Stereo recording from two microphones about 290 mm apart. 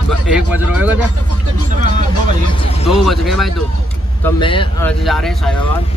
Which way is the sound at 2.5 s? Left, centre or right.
Centre.